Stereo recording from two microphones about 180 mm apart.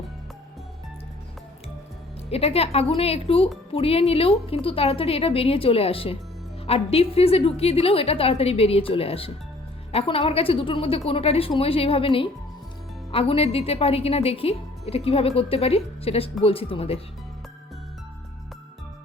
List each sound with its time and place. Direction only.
2.3 s a woman's voice: 35° left (ahead or behind)